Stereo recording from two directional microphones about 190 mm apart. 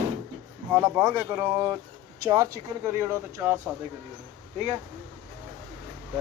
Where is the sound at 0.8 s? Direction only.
10° right (ahead or behind).